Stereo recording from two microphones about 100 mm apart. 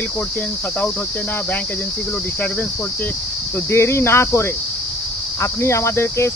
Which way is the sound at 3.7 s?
25° left (ahead or behind).